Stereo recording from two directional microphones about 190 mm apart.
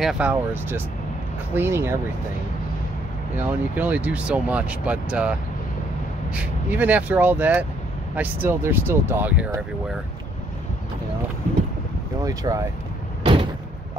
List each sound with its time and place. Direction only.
0.0 s speech: 5° right (ahead or behind)
3.7 s speech: 10° right (ahead or behind)
6.3 s speech: 5° right (ahead or behind)
12.2 s speech: 20° right (ahead or behind)
13.2 s door: 25° right (ahead or behind)